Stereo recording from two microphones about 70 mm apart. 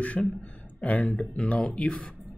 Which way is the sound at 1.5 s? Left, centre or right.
Centre.